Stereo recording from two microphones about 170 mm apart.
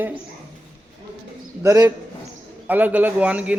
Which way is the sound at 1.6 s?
20° right (ahead or behind).